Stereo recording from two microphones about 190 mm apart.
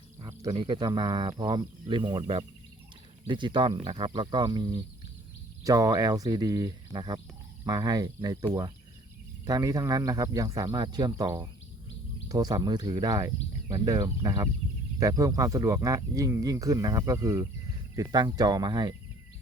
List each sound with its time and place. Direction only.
0.2 s speech: 20° right (ahead or behind)